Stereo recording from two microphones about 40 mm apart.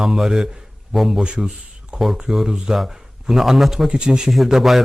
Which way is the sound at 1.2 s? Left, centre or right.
Right.